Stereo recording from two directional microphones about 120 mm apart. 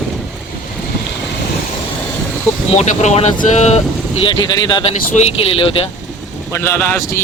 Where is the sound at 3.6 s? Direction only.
65° left (ahead or behind).